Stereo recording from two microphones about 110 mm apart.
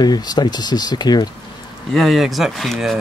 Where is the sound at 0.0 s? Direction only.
40° left (ahead or behind).